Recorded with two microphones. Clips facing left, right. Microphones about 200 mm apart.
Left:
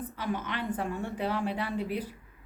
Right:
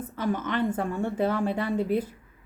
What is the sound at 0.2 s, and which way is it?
A woman's voice, 45° right (ahead or behind).